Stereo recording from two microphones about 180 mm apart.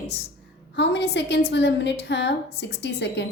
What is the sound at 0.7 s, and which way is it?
A woman's voice, 70° left (ahead or behind).